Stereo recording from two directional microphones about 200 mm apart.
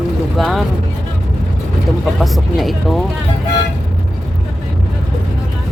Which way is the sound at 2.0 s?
Centre (ahead or behind).